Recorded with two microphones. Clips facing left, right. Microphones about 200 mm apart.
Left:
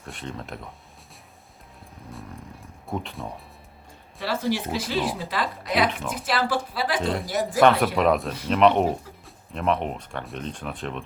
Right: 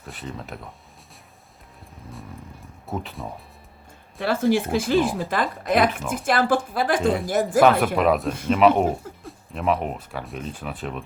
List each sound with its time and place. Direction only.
0.0 s speech: centre (ahead or behind)
2.8 s speech: centre (ahead or behind)
4.2 s speech: 50° right (ahead or behind)
7.9 s speech: centre (ahead or behind)